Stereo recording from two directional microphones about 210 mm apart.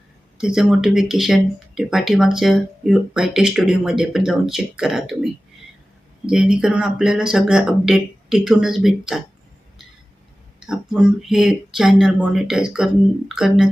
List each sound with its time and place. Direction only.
0.3 s speech: 5° right (ahead or behind)
10.6 s speech: centre (ahead or behind)